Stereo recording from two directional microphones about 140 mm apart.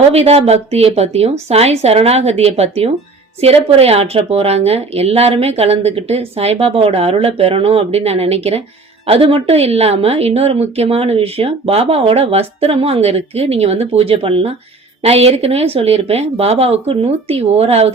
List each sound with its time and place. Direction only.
0.1 s a woman's voice: 50° right (ahead or behind)